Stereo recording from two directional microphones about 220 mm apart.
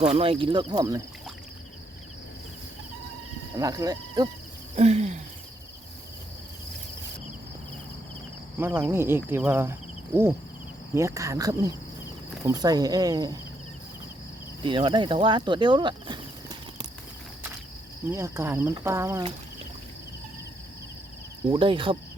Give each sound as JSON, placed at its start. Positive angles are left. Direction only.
{"t": 0.0, "sound": "speech", "side_deg": -25}
{"t": 3.6, "sound": "speech", "side_deg": -15}
{"t": 4.8, "sound": "a sound", "side_deg": -30}
{"t": 8.5, "sound": "speech", "side_deg": -10}
{"t": 10.9, "sound": "speech", "side_deg": -15}
{"t": 14.6, "sound": "speech", "side_deg": -20}
{"t": 18.1, "sound": "speech", "side_deg": -10}
{"t": 21.5, "sound": "speech", "side_deg": -25}